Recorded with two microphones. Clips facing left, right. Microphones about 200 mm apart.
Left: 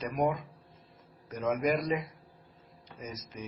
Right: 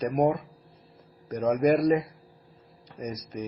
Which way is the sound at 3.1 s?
40° right (ahead or behind).